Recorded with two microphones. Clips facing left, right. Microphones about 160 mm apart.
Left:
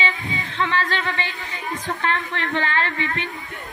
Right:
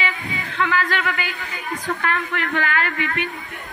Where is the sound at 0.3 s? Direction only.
25° left (ahead or behind).